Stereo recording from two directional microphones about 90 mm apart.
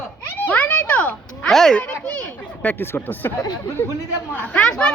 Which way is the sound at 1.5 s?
5° left (ahead or behind).